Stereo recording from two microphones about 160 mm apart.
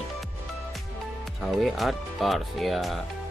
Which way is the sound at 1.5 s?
Centre (ahead or behind).